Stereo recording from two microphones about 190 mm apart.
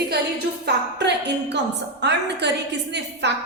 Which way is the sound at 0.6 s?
65° right (ahead or behind).